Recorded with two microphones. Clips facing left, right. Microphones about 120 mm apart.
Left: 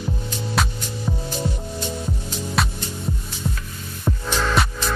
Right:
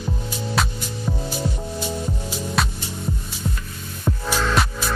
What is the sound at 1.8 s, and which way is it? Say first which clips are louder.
Music: right 2 dB; 5° right (ahead or behind).